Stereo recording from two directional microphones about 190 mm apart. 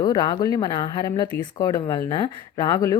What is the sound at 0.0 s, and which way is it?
A woman's voice, 20° left (ahead or behind).